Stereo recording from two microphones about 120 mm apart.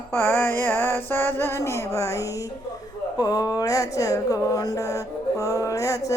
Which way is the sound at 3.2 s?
30° left (ahead or behind).